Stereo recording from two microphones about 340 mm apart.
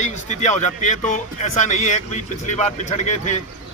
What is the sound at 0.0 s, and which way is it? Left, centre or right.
Speech, centre.